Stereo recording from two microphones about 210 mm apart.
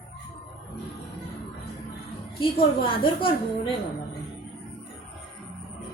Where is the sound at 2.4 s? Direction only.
25° left (ahead or behind).